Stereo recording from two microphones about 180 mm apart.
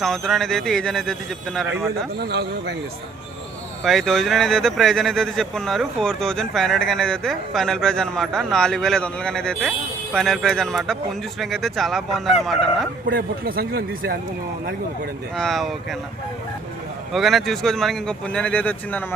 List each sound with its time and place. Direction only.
0.0 s speech: centre (ahead or behind)
2.2 s a man's voice: 65° right (ahead or behind)
3.8 s speech: centre (ahead or behind)
13.1 s a man's voice: 55° right (ahead or behind)
15.4 s speech: centre (ahead or behind)
17.1 s speech: centre (ahead or behind)